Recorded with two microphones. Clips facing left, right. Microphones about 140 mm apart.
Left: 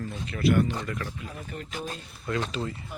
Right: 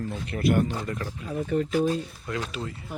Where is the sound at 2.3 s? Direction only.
5° right (ahead or behind).